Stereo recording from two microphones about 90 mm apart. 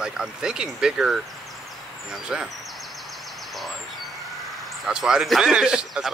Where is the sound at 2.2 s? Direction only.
10° right (ahead or behind).